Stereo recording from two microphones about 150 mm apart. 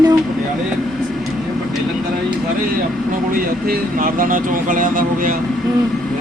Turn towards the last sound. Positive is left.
turn(degrees=-65)  # may be behind; listen again after turning